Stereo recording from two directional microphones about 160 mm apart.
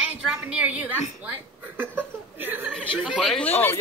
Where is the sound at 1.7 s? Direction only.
10° right (ahead or behind).